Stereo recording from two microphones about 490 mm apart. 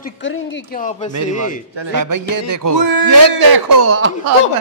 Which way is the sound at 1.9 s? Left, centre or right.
Right.